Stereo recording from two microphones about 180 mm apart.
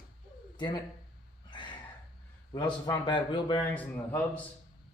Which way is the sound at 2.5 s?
25° left (ahead or behind).